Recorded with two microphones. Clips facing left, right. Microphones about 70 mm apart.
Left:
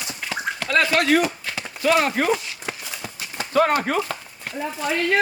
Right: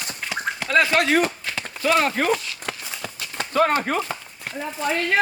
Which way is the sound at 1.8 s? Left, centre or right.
Left.